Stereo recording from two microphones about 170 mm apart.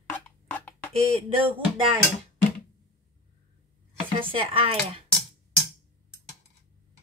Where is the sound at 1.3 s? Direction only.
30° right (ahead or behind).